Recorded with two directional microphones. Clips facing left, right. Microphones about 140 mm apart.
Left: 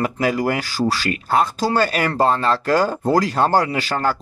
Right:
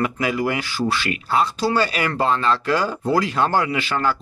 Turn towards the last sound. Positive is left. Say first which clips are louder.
# left 1 dB
turn(degrees=40)  # may be behind; listen again after turning